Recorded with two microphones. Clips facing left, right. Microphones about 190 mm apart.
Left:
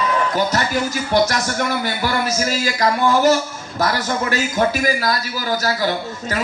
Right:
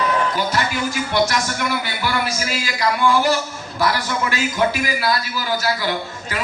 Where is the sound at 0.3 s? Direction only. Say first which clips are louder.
Left 3 dB; 45° left (ahead or behind).